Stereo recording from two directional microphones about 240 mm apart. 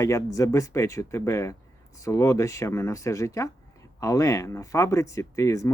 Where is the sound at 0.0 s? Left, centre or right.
Centre.